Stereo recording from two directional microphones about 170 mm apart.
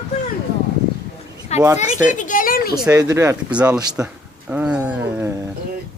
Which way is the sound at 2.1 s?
50° left (ahead or behind).